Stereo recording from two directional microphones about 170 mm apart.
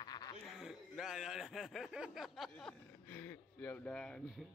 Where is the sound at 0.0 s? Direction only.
25° left (ahead or behind).